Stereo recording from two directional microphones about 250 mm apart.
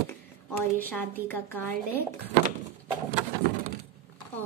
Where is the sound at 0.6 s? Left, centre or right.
Centre.